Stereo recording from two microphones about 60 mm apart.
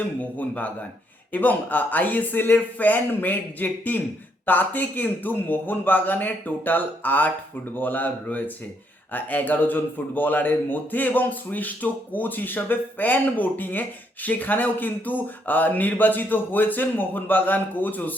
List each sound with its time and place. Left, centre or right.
0.0 s a man's voice: left